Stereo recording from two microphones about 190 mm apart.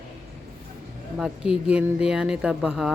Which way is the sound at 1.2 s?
5° right (ahead or behind).